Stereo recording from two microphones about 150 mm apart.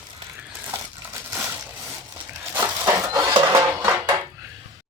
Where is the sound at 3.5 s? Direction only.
20° right (ahead or behind).